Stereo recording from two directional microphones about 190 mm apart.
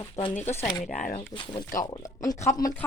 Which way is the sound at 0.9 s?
45° left (ahead or behind).